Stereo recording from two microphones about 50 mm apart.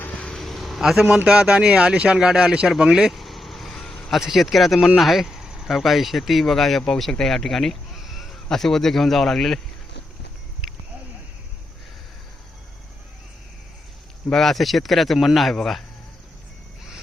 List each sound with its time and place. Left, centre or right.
0.3 s a sound: centre
1.1 s speech: centre
3.1 s vehicle: centre
4.2 s speech: centre
4.9 s a sound: centre
5.7 s speech: centre
7.9 s a sound: centre
8.4 s speech: centre
14.3 s speech: centre